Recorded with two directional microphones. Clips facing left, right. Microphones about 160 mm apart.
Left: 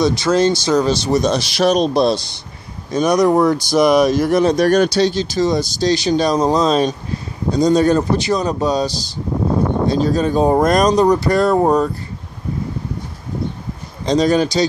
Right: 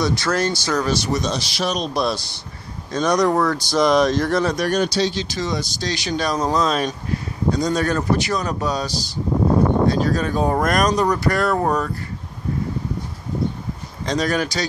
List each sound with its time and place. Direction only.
0.0 s speech: 20° left (ahead or behind)
1.2 s speech: 60° left (ahead or behind)
1.7 s speech: 30° left (ahead or behind)
2.9 s speech: 10° left (ahead or behind)
4.7 s speech: 60° left (ahead or behind)
5.1 s speech: 40° left (ahead or behind); by 11.9 s 25° left (ahead or behind)
14.0 s speech: 25° left (ahead or behind)